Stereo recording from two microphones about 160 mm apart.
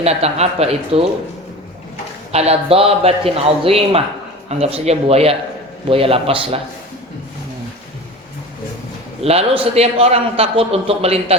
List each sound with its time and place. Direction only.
0.0 s a man's voice: 40° right (ahead or behind)
2.3 s a man's voice: 40° right (ahead or behind)
9.2 s a man's voice: 40° right (ahead or behind)